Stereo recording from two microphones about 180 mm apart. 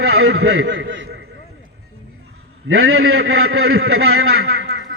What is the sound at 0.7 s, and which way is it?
Speech, 90° right.